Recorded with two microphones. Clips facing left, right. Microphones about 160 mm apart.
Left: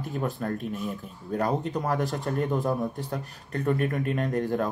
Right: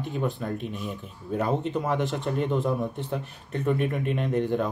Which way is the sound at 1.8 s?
20° right (ahead or behind).